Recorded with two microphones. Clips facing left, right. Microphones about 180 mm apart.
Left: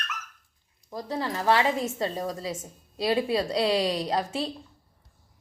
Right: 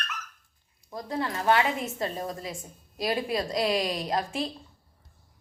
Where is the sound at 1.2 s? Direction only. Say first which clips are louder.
Even; 30° left (ahead or behind).